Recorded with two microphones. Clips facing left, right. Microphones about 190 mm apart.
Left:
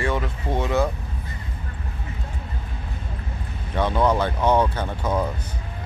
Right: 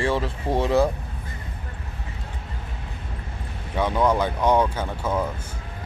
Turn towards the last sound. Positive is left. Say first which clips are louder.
# left 1 dB
turn(degrees=15)  # may be behind; listen again after turning